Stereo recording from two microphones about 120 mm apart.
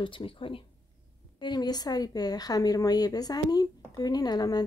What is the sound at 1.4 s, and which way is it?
A woman's voice, 35° left (ahead or behind).